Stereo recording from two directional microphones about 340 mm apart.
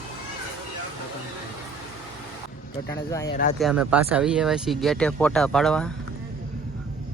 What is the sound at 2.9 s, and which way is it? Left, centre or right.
Speech, centre.